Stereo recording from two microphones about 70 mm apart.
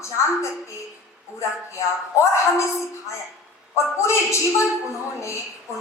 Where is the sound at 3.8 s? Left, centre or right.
Left.